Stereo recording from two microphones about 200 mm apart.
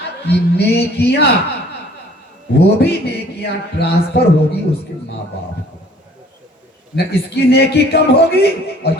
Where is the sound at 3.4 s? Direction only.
55° left (ahead or behind).